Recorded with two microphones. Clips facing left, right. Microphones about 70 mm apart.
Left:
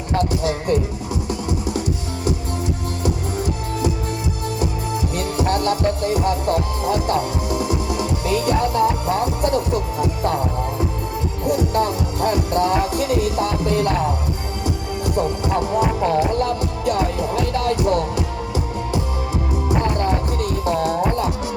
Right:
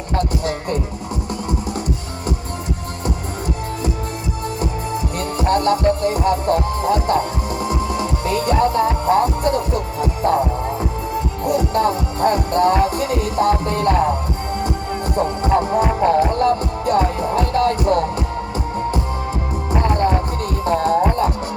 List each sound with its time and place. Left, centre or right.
4.6 s music: right
11.4 s music: right
15.1 s music: right
19.6 s music: right